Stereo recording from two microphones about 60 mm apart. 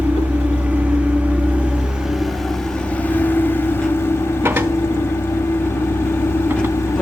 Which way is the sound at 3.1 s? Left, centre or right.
Left.